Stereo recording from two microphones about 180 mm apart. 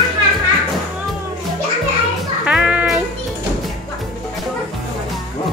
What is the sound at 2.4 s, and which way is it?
Music, 5° right (ahead or behind).